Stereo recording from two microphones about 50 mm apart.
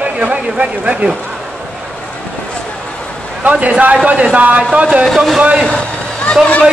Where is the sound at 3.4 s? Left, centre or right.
Right.